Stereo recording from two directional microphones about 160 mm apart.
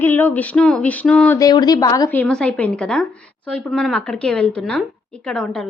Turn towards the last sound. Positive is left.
turn(degrees=5)  # may be behind; listen again after turning